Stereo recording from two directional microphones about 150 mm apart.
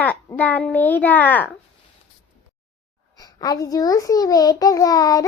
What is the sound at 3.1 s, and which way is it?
A child's voice, 25° left (ahead or behind).